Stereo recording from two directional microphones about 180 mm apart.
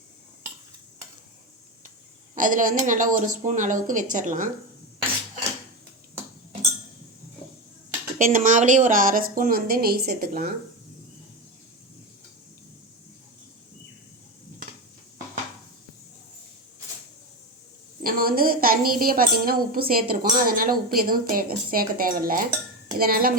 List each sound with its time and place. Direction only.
2.3 s speech: 45° right (ahead or behind)
8.2 s speech: 50° right (ahead or behind)
18.0 s speech: 55° right (ahead or behind)